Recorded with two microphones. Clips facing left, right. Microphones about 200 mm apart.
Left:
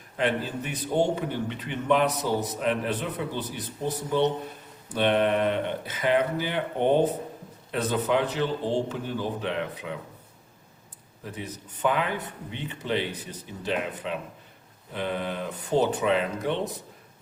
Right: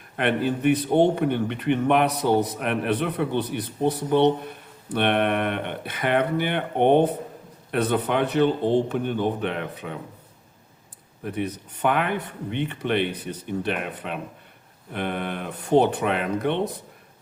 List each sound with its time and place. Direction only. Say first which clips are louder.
0.2 s a man's voice: right 5 dB; 60° right (ahead or behind)
11.2 s a man's voice: right 8 dB; 60° right (ahead or behind)